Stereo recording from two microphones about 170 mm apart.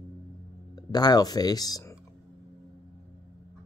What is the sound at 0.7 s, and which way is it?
Speech, 25° left (ahead or behind).